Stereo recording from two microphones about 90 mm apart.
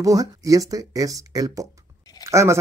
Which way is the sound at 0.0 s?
40° right (ahead or behind).